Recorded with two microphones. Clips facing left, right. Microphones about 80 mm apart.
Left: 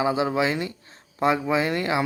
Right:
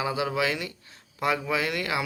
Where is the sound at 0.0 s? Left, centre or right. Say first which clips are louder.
Left 4 dB; left.